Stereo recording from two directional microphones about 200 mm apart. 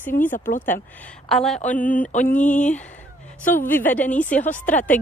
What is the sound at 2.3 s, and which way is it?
Speech, 40° left (ahead or behind).